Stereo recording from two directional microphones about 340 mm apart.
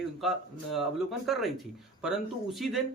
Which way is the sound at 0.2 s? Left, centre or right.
Centre.